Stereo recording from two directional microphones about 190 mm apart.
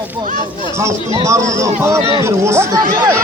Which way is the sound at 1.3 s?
15° right (ahead or behind).